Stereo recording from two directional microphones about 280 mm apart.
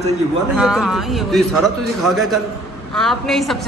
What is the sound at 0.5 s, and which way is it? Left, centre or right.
A woman's voice, centre.